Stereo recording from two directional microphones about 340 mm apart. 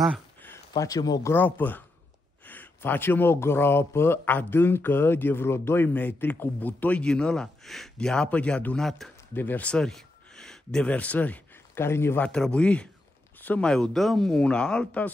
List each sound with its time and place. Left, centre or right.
0.0 s speech: centre